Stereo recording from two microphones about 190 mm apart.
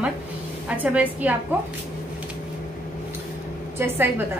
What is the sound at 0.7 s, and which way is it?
Speech, 5° right (ahead or behind).